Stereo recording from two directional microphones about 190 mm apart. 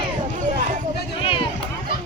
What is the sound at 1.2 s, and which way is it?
Run, 25° left (ahead or behind).